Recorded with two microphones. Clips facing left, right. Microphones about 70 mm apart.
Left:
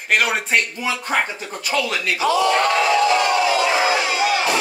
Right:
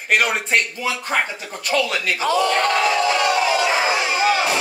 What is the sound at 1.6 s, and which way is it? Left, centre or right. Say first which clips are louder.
Speech: right 1 dB; centre.